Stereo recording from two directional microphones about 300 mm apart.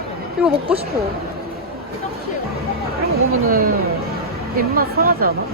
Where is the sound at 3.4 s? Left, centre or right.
Right.